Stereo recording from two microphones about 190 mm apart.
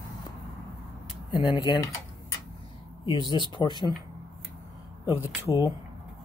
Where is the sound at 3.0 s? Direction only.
25° left (ahead or behind).